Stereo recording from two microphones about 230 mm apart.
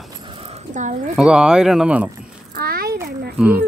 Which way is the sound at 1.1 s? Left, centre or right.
Centre.